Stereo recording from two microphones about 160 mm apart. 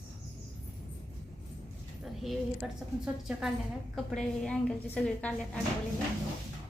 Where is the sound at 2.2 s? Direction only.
Centre (ahead or behind).